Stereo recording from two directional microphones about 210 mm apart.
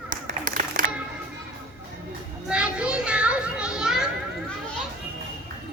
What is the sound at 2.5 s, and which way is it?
Children playing, 5° right (ahead or behind).